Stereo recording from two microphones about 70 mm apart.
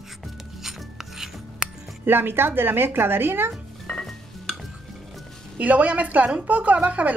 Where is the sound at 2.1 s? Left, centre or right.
Right.